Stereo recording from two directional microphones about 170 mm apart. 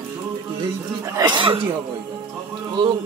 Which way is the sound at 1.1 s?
25° right (ahead or behind).